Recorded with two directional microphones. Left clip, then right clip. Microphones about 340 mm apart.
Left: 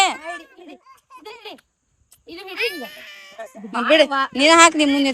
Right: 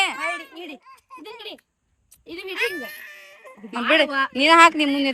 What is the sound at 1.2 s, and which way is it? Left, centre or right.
A child's voice, centre.